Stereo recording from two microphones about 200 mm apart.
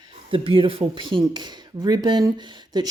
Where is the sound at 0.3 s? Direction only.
25° right (ahead or behind).